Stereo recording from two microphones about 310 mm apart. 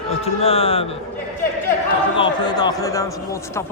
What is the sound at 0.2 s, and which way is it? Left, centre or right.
Speech, centre.